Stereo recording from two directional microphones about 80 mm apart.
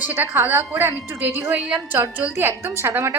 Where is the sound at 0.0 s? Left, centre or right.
Right.